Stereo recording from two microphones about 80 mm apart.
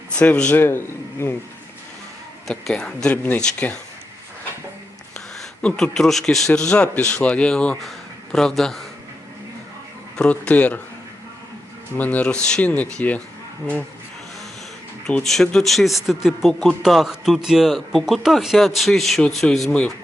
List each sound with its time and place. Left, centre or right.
0.2 s speech: centre
0.5 s a man's voice: left
2.5 s speech: centre
5.1 s speech: centre
10.2 s speech: centre
11.9 s speech: centre
15.0 s speech: centre